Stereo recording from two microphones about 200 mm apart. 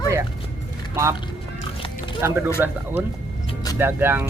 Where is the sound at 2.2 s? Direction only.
15° right (ahead or behind).